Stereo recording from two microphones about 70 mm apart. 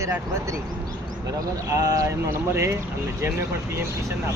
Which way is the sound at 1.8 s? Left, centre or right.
Right.